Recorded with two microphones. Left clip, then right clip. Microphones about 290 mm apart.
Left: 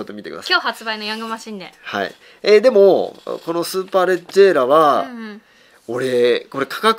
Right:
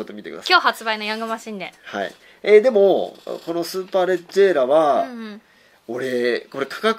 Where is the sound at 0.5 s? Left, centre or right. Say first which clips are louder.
Right 2 dB; right; by 1.7 s centre.